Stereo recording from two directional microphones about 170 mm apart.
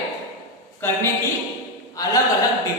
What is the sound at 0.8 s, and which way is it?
Speech, 15° left (ahead or behind).